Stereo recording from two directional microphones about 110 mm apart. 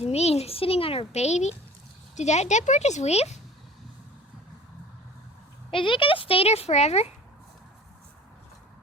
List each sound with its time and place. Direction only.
0.0 s a child's voice: 75° left (ahead or behind)
5.7 s speech: 50° left (ahead or behind); by 7.1 s 75° left (ahead or behind)